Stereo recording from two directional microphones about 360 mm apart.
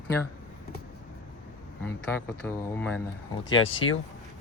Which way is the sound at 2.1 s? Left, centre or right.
Centre.